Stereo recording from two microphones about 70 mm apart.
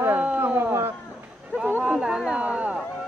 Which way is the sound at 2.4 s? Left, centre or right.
Centre.